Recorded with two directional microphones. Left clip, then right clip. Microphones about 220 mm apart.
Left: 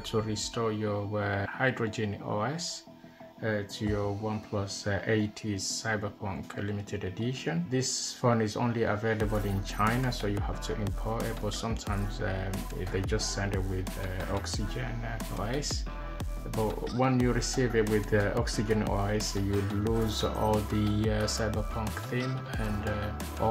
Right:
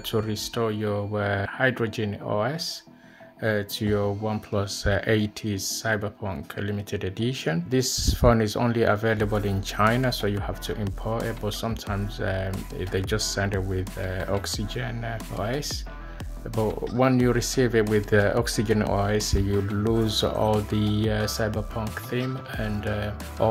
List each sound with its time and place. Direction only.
0.1 s speech: 30° right (ahead or behind)
3.4 s speech: 40° right (ahead or behind)
11.6 s speech: 30° right (ahead or behind)
16.5 s speech: centre (ahead or behind)
17.3 s speech: 35° right (ahead or behind)